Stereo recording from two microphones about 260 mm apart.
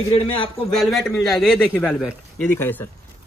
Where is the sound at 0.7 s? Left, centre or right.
Centre.